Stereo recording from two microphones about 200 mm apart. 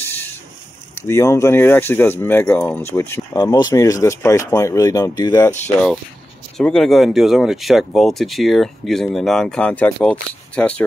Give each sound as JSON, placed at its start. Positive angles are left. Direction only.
{"t": 0.0, "sound": "a sound", "side_deg": 10}
{"t": 0.9, "sound": "speech", "side_deg": 15}
{"t": 6.6, "sound": "speech", "side_deg": 5}